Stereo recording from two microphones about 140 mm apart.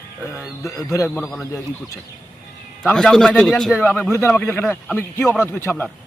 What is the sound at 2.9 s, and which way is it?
A man's voice, 5° left (ahead or behind).